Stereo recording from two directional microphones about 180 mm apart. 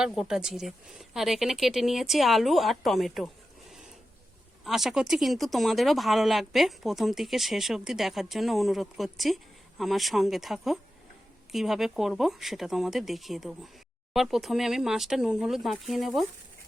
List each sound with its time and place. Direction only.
0.0 s speech: 5° right (ahead or behind)
4.6 s speech: centre (ahead or behind)